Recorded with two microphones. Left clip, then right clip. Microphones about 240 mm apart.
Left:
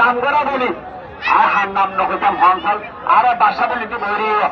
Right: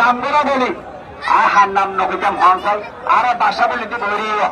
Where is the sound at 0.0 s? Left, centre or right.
Centre.